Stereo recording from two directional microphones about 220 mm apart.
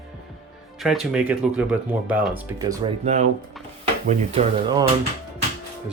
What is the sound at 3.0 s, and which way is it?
Speech, 30° right (ahead or behind).